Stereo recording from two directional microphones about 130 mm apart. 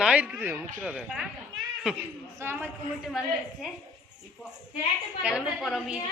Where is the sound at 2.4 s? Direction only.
20° right (ahead or behind).